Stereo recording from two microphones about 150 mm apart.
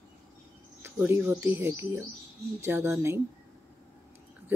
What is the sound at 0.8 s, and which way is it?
Speech, 15° right (ahead or behind).